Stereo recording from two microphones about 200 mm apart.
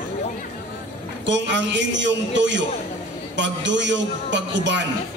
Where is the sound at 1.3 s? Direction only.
65° right (ahead or behind).